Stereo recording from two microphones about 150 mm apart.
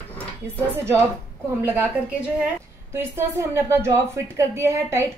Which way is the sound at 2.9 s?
15° right (ahead or behind).